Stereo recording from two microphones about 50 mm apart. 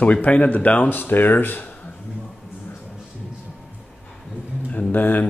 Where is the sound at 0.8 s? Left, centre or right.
Left.